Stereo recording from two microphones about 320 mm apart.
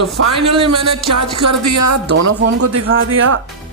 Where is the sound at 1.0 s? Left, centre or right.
Right.